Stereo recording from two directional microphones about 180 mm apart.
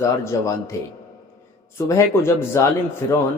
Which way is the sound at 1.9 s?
15° left (ahead or behind).